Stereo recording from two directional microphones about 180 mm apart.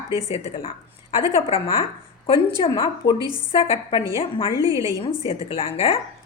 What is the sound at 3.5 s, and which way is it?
A woman's voice, 30° left (ahead or behind).